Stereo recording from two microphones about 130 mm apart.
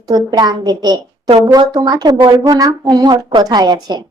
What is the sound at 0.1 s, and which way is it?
A woman's voice, 30° right (ahead or behind).